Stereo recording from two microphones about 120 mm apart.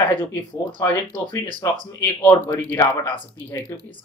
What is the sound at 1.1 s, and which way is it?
Speech, 90° right.